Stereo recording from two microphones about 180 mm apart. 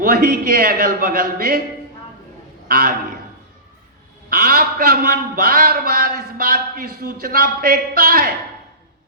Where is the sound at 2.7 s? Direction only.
55° right (ahead or behind).